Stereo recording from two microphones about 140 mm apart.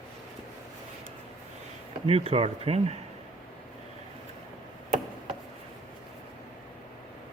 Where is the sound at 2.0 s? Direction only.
45° right (ahead or behind).